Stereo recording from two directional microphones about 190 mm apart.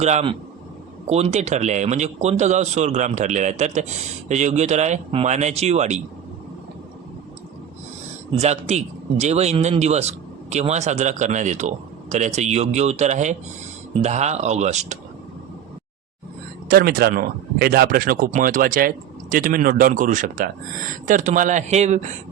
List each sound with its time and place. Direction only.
0.0 s speech: 35° right (ahead or behind)
8.4 s speech: 35° right (ahead or behind)
16.6 s speech: 55° right (ahead or behind); by 22.0 s 35° right (ahead or behind)